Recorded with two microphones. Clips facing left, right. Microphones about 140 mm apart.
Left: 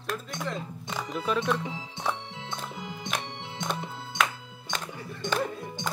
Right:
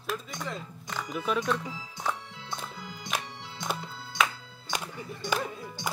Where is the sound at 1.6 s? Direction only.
20° left (ahead or behind).